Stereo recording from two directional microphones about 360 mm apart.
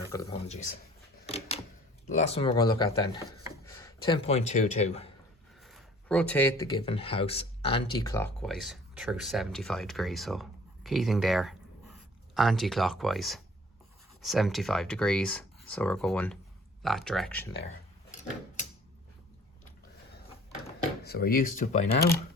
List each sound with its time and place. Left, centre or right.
0.1 s speech: centre
2.0 s speech: centre
5.5 s speech: centre
20.7 s speech: left